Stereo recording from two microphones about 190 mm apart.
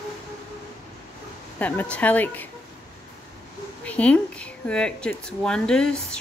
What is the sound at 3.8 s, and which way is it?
Speech, 5° left (ahead or behind).